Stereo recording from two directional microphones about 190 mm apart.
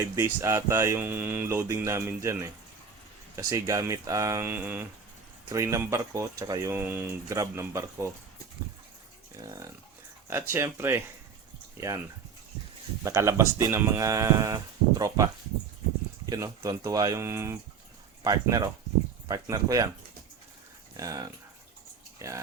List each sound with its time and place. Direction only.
0.0 s speech: 15° right (ahead or behind)
9.4 s speech: 15° right (ahead or behind)
13.1 s speech: 15° right (ahead or behind)
20.9 s speech: 20° right (ahead or behind)